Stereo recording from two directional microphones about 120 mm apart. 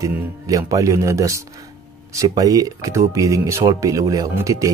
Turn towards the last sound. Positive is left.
turn(degrees=-25)  # may be behind; listen again after turning